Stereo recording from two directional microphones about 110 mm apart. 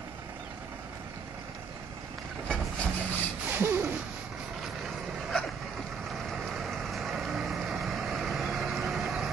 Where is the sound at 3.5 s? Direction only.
20° right (ahead or behind).